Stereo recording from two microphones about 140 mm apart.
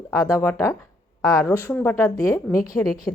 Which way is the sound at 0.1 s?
20° left (ahead or behind).